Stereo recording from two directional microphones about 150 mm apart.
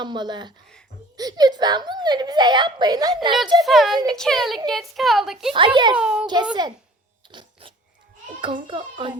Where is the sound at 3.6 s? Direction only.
Centre (ahead or behind).